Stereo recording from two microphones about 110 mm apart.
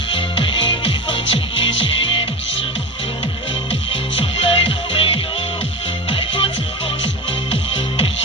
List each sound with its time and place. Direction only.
0.1 s music: 50° left (ahead or behind)
3.7 s music: 65° left (ahead or behind)
7.5 s music: 65° left (ahead or behind)